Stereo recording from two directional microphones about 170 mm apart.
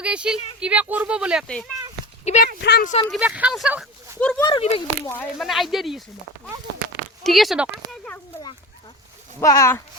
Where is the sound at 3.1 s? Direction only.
10° right (ahead or behind).